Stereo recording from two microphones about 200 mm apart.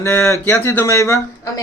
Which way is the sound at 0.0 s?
15° left (ahead or behind).